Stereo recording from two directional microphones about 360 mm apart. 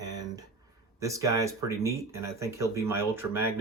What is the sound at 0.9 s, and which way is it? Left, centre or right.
Speech, centre.